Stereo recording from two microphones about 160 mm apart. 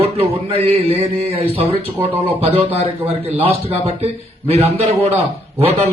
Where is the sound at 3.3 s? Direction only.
40° right (ahead or behind).